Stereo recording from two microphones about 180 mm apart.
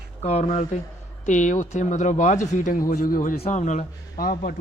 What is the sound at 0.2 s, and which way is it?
Speech, 35° left (ahead or behind).